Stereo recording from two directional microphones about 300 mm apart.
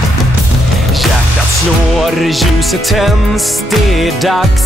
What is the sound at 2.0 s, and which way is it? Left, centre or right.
Music, centre.